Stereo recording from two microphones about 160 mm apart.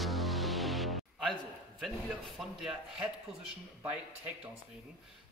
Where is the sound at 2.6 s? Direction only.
5° right (ahead or behind).